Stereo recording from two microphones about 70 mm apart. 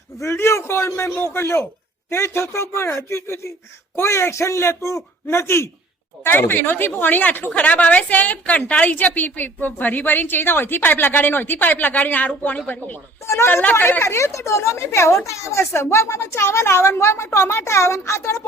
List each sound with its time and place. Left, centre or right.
0.2 s a woman's voice: left
6.2 s a woman's voice: left
13.2 s a woman's voice: left